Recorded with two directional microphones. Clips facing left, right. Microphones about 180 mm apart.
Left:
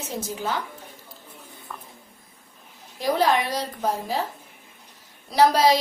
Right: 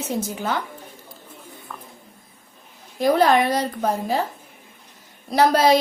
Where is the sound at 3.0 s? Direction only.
55° right (ahead or behind).